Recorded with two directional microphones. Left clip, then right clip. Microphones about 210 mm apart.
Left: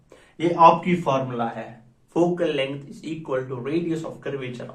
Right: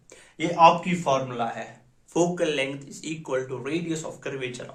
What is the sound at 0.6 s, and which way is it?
Speech, 25° right (ahead or behind).